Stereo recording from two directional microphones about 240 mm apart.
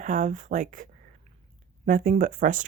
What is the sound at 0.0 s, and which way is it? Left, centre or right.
Speech, right.